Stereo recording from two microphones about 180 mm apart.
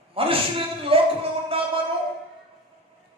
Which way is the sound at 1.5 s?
30° right (ahead or behind).